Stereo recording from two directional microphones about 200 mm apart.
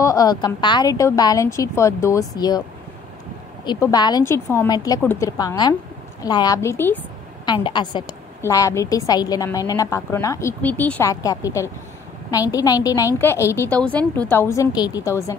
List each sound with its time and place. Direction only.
0.0 s a woman's voice: 15° left (ahead or behind)
3.6 s a woman's voice: 20° left (ahead or behind)
7.4 s a woman's voice: 25° left (ahead or behind)